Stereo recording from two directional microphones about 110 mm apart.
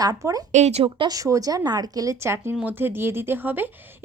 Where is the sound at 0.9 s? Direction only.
35° right (ahead or behind).